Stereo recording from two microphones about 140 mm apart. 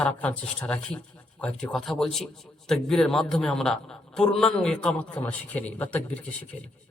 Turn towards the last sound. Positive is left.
turn(degrees=10)  # may be behind; listen again after turning